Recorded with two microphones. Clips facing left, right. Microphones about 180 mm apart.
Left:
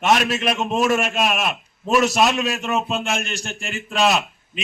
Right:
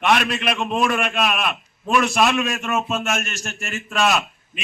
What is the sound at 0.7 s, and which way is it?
A man's voice, 40° left (ahead or behind).